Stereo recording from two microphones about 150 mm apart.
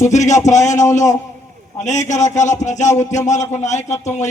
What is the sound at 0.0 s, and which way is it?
A man's voice, 50° left (ahead or behind).